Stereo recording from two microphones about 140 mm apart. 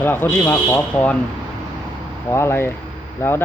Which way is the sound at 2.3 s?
20° left (ahead or behind).